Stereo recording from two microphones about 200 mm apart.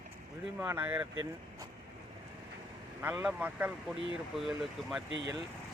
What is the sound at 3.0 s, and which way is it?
A man's voice, 10° right (ahead or behind).